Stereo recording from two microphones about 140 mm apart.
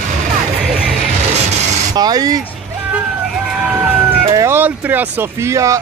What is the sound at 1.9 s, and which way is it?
Speech, 25° right (ahead or behind).